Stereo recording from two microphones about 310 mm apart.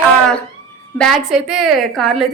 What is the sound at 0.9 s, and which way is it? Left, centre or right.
A woman's voice, centre.